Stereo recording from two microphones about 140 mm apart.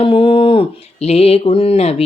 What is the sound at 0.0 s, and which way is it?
Speech, 40° left (ahead or behind).